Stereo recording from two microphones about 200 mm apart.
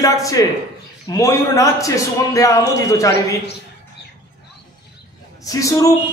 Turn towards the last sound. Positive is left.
turn(degrees=15)  # may be behind; listen again after turning